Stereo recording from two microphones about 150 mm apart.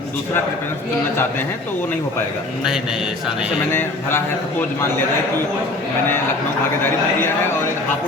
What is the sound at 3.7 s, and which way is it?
Speech, 15° left (ahead or behind).